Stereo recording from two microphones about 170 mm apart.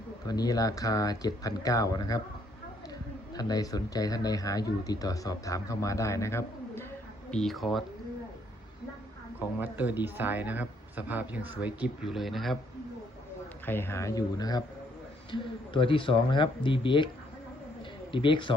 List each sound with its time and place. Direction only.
0.3 s speech: 20° left (ahead or behind)
3.3 s speech: 20° left (ahead or behind)
7.3 s speech: 5° left (ahead or behind)
9.6 s speech: 10° right (ahead or behind)
13.7 s speech: 15° left (ahead or behind); by 17.1 s 30° left (ahead or behind)
18.1 s speech: 30° left (ahead or behind)